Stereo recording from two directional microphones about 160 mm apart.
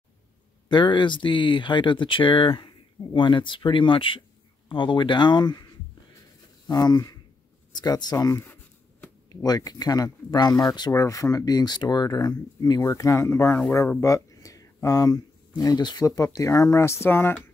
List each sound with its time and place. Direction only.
0.7 s speech: 30° left (ahead or behind)
6.7 s speech: 25° left (ahead or behind)